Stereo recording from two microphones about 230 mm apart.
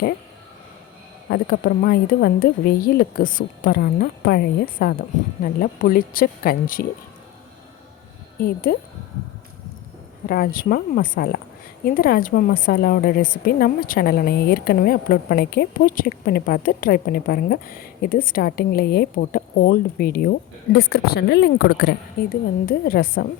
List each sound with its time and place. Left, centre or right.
1.3 s speech: left
8.4 s speech: left
10.2 s a woman's voice: left